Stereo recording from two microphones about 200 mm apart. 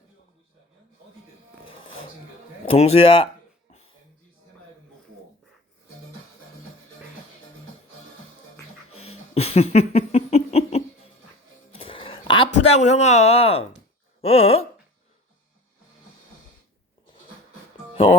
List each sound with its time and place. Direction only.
2.7 s speech: 30° left (ahead or behind)
8.9 s a sound: 30° left (ahead or behind)
12.5 s speech: 35° left (ahead or behind)